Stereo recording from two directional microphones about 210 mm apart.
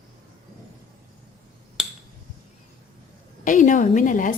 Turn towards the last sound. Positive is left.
turn(degrees=40)  # may be behind; listen again after turning